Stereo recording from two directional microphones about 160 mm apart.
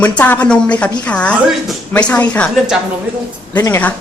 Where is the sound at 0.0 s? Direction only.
10° left (ahead or behind).